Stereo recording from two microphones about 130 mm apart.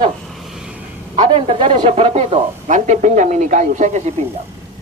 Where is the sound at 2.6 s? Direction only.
65° right (ahead or behind).